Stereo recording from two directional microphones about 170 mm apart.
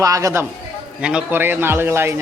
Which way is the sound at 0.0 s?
20° right (ahead or behind).